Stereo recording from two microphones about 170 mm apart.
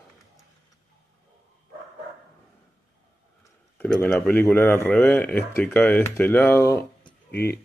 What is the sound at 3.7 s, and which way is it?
Speech, 10° left (ahead or behind).